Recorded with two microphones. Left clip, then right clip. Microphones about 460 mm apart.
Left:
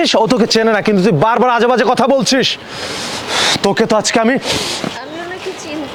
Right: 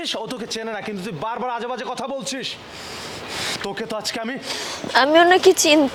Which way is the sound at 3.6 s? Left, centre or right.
Left.